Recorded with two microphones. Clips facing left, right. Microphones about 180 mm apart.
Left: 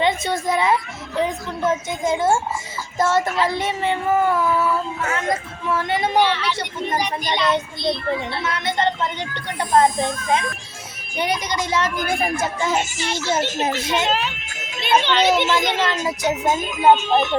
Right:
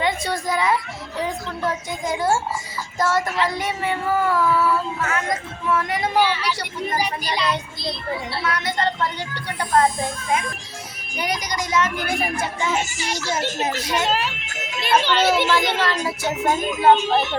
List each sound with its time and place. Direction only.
0.0 s a child's voice: 25° left (ahead or behind)
6.1 s speech: 5° right (ahead or behind)
7.8 s speech: centre (ahead or behind)
8.4 s speech: 25° left (ahead or behind)
12.0 s a child's voice: 45° left (ahead or behind)
13.1 s speech: 25° left (ahead or behind)
14.1 s speech: 5° right (ahead or behind)
15.8 s speech: 20° left (ahead or behind)